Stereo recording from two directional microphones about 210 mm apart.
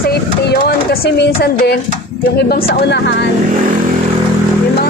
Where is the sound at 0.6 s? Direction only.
45° left (ahead or behind).